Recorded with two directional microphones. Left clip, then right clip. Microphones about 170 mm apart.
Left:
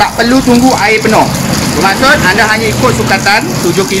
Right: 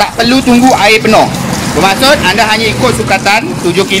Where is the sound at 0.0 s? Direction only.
50° right (ahead or behind).